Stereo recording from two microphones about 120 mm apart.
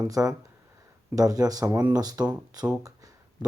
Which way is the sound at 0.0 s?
30° right (ahead or behind).